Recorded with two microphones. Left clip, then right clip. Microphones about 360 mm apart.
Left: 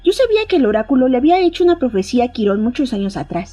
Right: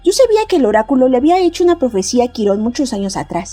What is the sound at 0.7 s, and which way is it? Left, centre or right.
Speech, right.